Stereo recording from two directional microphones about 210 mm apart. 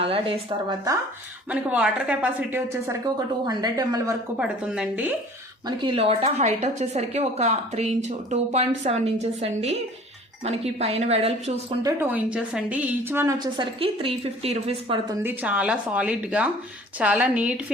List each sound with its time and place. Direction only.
0.0 s a sound: 25° right (ahead or behind)
1.5 s a woman's voice: 5° right (ahead or behind)
3.4 s a woman's voice: 20° right (ahead or behind)
4.4 s a woman's voice: 5° right (ahead or behind)
5.6 s a woman's voice: 25° right (ahead or behind)
11.8 s a woman's voice: 15° right (ahead or behind); by 14.9 s 30° right (ahead or behind)
15.1 s a woman's voice: 10° right (ahead or behind)